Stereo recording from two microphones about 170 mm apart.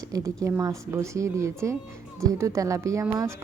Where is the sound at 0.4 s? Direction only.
20° right (ahead or behind).